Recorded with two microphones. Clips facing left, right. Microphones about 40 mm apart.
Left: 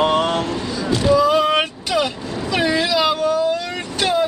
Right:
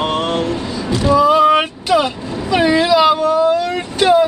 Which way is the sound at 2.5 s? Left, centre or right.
Centre.